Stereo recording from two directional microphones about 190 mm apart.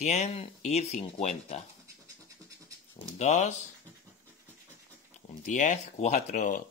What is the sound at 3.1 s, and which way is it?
Speech, 35° left (ahead or behind).